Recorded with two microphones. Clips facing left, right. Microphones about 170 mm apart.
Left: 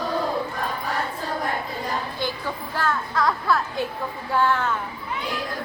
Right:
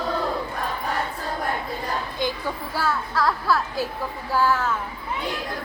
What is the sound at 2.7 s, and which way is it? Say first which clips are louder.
A child's voice: left 1 dB; 5° right (ahead or behind).